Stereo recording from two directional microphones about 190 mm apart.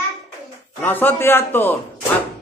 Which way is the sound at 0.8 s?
10° left (ahead or behind).